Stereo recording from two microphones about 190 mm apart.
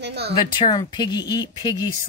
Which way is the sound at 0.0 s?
60° right (ahead or behind).